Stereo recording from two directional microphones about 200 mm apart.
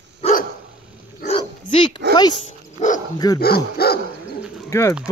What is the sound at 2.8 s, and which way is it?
Dog, 40° left (ahead or behind).